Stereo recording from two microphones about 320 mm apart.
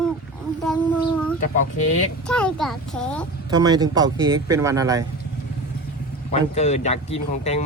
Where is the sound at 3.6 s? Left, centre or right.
Centre.